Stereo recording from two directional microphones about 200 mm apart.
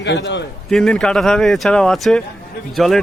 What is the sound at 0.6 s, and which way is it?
Speech, centre (ahead or behind).